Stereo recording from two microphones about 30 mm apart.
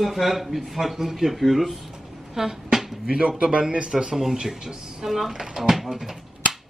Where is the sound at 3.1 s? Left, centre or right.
Right.